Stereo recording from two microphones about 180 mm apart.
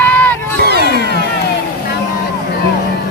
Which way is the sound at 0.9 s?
60° right (ahead or behind).